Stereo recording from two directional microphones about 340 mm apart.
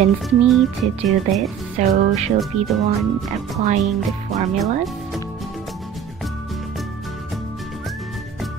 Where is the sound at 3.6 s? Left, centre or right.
Right.